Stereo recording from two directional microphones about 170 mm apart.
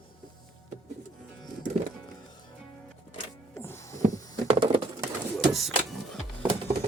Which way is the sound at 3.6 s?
15° left (ahead or behind).